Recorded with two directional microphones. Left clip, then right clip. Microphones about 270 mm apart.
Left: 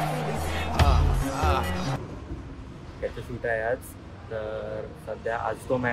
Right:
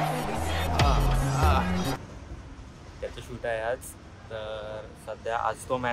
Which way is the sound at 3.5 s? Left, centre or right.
Centre.